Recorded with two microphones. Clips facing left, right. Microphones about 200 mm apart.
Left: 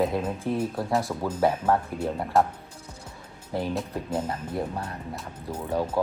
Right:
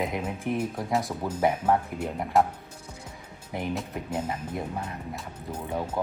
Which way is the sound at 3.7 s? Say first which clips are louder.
Left 2 dB; 10° right (ahead or behind).